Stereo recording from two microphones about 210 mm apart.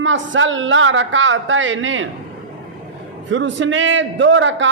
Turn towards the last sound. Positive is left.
turn(degrees=-60)  # may be behind; listen again after turning